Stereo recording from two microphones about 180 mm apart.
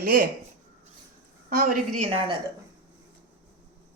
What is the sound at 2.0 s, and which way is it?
Speech, 30° right (ahead or behind).